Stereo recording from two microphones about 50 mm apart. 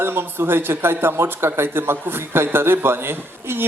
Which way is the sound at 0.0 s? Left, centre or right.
Right.